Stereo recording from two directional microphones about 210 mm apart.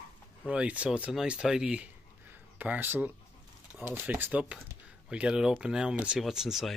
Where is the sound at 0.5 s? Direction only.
5° right (ahead or behind).